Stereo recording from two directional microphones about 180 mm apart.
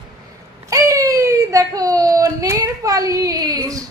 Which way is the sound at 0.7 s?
20° right (ahead or behind).